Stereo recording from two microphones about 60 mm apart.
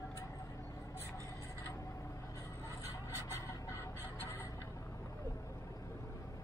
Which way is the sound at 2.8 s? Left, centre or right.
Left.